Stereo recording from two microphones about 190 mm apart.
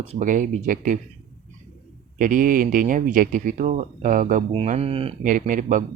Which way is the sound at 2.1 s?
45° right (ahead or behind).